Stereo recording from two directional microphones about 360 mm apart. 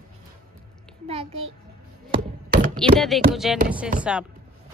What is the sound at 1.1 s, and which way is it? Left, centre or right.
Child singing, centre.